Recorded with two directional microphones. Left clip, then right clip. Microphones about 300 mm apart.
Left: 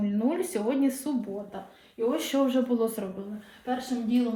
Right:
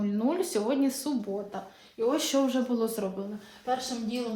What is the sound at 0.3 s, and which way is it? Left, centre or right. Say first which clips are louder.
Speech: right 1 dB; centre.